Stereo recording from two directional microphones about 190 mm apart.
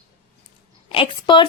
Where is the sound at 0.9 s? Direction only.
25° left (ahead or behind).